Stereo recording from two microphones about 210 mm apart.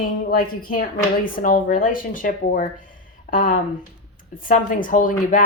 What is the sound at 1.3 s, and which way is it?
Speech, 40° left (ahead or behind).